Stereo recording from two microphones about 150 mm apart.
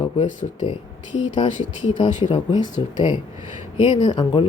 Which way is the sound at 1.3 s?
35° left (ahead or behind).